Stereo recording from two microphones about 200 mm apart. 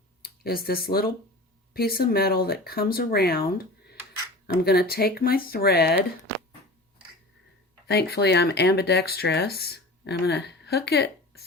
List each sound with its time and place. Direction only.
0.2 s speech: 50° left (ahead or behind)
7.9 s speech: 55° left (ahead or behind)